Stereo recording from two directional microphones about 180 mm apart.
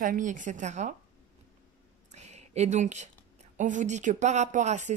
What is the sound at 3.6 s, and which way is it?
A woman's voice, 45° right (ahead or behind).